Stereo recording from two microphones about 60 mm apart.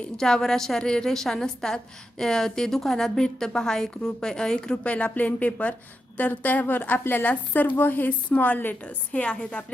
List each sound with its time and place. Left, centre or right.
0.2 s a woman's voice: centre